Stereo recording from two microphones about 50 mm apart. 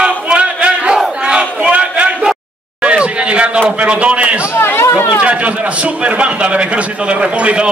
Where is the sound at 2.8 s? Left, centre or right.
Right.